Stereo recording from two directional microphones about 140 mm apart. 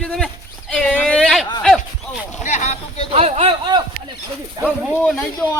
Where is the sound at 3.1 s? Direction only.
45° right (ahead or behind).